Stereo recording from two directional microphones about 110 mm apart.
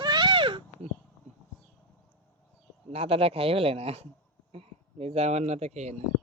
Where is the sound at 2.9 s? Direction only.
65° right (ahead or behind); by 5.9 s 90° right.